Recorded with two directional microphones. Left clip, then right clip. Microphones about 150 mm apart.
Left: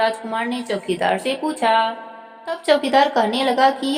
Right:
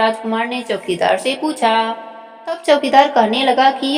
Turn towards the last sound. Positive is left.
turn(degrees=-20)  # may be behind; listen again after turning